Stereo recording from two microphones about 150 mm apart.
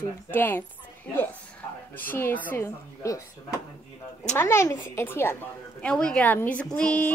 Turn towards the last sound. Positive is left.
turn(degrees=10)  # may be behind; listen again after turning